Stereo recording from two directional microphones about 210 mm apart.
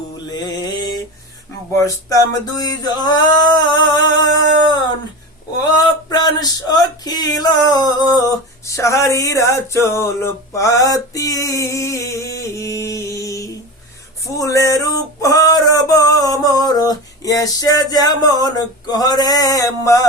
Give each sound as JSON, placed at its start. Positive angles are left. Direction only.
{"t": 0.3, "sound": "music", "side_deg": 20}
{"t": 1.7, "sound": "male singing", "side_deg": 15}
{"t": 5.6, "sound": "a sound", "side_deg": 20}
{"t": 14.3, "sound": "male singing", "side_deg": 15}